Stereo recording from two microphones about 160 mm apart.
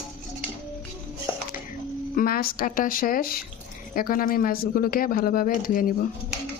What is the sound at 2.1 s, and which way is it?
Speech, 65° left (ahead or behind).